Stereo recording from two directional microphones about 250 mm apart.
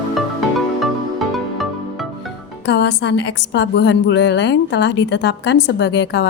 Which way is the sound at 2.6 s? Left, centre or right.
Left.